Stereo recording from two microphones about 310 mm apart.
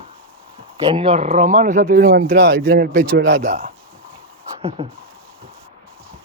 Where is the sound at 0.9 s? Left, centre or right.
Centre; by 3.4 s right.